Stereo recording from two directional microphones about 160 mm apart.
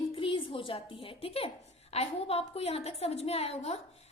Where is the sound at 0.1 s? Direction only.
35° left (ahead or behind).